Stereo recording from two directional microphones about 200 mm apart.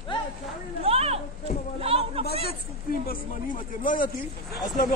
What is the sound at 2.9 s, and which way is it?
Speech, 45° left (ahead or behind).